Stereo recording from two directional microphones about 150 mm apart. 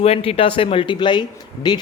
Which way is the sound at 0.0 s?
40° left (ahead or behind).